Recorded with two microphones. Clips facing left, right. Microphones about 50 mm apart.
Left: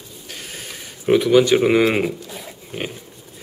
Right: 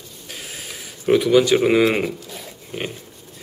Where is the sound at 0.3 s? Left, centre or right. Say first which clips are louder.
Even; centre.